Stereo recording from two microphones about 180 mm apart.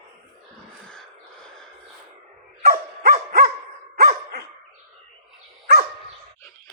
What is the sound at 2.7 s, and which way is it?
Dog, 50° right (ahead or behind).